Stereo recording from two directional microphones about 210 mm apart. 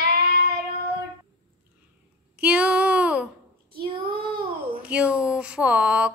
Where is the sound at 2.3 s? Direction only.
5° right (ahead or behind).